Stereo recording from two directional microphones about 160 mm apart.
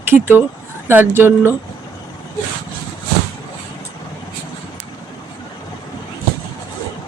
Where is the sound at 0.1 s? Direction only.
15° right (ahead or behind).